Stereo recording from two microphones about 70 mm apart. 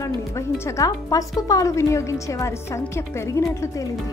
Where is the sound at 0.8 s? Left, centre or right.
Left.